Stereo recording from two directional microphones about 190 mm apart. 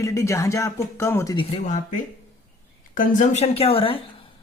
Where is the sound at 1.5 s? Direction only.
40° left (ahead or behind).